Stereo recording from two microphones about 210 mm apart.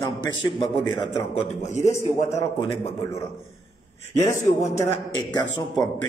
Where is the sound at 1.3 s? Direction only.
35° left (ahead or behind).